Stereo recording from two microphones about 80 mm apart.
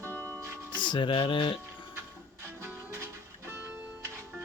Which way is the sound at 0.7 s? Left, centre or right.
Left.